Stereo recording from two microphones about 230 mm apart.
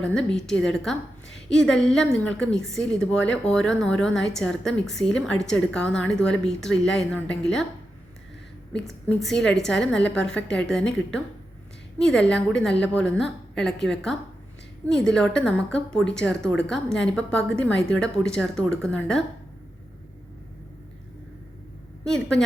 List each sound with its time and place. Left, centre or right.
0.0 s a woman's voice: centre
9.0 s a woman's voice: centre